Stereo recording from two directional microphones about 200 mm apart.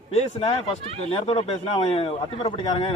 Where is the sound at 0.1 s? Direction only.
30° left (ahead or behind).